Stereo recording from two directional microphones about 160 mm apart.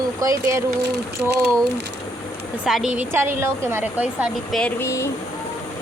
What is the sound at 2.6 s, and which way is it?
A woman's voice, 5° right (ahead or behind).